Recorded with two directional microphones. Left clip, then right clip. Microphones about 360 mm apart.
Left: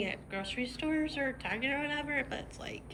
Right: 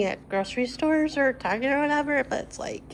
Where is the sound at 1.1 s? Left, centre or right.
Right.